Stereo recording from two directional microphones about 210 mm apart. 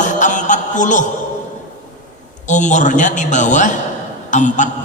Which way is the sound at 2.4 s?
35° left (ahead or behind).